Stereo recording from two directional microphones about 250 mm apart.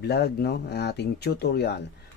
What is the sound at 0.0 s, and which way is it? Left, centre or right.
Speech, left.